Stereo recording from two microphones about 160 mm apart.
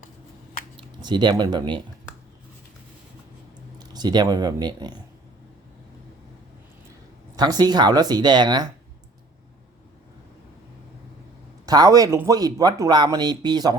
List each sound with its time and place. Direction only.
0.8 s speech: 30° right (ahead or behind)
3.8 s speech: 25° right (ahead or behind)
7.3 s speech: 25° right (ahead or behind)
11.6 s speech: 25° right (ahead or behind)